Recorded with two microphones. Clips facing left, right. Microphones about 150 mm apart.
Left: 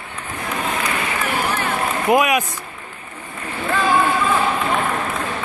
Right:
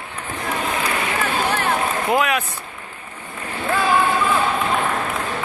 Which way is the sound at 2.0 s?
15° left (ahead or behind).